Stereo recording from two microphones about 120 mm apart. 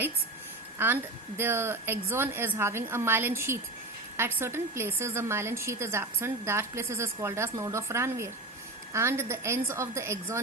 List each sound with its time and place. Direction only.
0.8 s a woman's voice: 15° right (ahead or behind)